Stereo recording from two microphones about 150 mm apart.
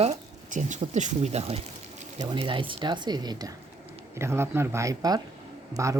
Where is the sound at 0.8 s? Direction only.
50° right (ahead or behind).